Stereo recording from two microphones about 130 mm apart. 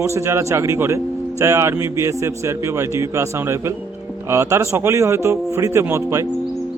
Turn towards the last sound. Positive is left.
turn(degrees=-20)  # may be behind; listen again after turning